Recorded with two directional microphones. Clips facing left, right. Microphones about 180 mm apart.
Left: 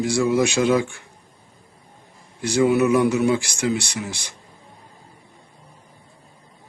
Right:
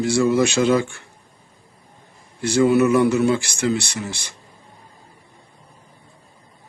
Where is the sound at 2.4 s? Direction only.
10° left (ahead or behind).